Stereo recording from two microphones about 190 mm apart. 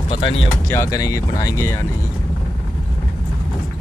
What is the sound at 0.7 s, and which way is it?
Speech, 20° left (ahead or behind).